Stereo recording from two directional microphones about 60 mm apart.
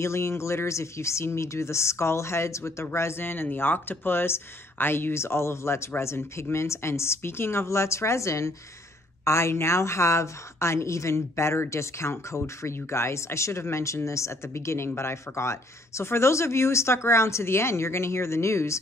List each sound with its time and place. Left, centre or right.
0.0 s speech: left